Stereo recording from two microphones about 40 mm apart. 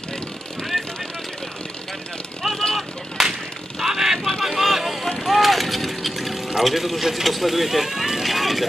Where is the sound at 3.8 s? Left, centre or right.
Centre.